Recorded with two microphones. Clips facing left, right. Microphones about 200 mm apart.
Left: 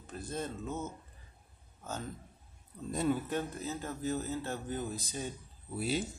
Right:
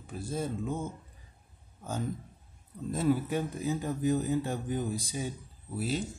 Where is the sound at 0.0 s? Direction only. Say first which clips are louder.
Right 4 dB; 10° right (ahead or behind).